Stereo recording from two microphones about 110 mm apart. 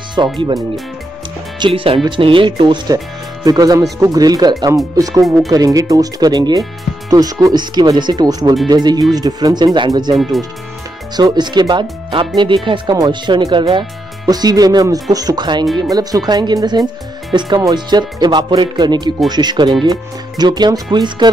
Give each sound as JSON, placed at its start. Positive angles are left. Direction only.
{"t": 0.1, "sound": "speech", "side_deg": -45}
{"t": 1.7, "sound": "speech", "side_deg": -60}
{"t": 3.4, "sound": "speech", "side_deg": -35}
{"t": 11.1, "sound": "speech", "side_deg": -40}